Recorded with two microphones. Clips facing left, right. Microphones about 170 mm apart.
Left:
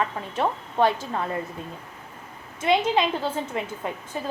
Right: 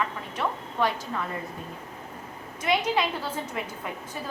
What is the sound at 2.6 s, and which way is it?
A woman's voice, 25° left (ahead or behind).